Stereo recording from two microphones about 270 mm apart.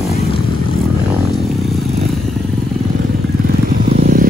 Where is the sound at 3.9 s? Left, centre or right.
Right.